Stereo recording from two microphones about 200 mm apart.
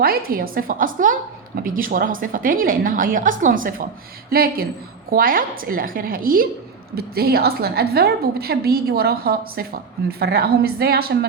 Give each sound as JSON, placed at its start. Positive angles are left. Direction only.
{"t": 0.3, "sound": "a woman's voice", "side_deg": -45}